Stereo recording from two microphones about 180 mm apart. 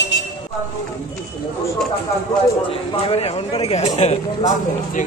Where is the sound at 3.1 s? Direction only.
35° left (ahead or behind).